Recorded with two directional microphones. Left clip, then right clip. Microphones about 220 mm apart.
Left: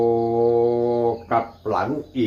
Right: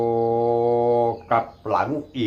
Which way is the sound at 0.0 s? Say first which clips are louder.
Left 2 dB; 45° right (ahead or behind).